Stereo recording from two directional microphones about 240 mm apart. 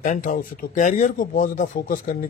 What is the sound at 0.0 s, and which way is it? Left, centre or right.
Speech, left.